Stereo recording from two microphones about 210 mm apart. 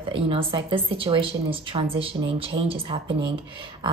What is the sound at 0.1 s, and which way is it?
A woman's voice, 25° right (ahead or behind).